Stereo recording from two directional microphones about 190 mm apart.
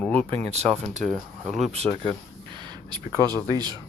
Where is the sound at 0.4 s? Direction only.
35° right (ahead or behind).